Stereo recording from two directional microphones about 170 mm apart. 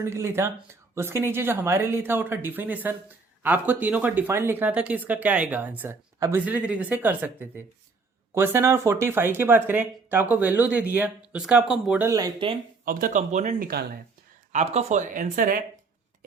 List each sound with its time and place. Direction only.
0.0 s speech: 15° right (ahead or behind)
12.0 s speech: 20° right (ahead or behind)
12.8 s speech: 55° right (ahead or behind)
13.6 s speech: 65° right (ahead or behind)
14.5 s speech: 40° right (ahead or behind)